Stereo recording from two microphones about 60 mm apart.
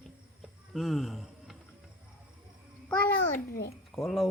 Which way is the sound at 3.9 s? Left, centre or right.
Centre.